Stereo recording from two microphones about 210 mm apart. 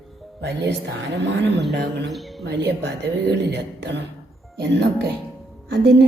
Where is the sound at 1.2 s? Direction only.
55° right (ahead or behind).